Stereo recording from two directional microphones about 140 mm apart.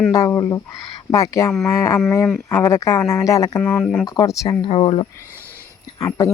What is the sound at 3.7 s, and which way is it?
Speech, 5° left (ahead or behind).